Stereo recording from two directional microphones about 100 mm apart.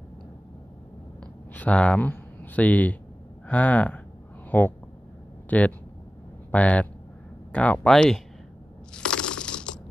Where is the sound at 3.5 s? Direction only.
15° left (ahead or behind).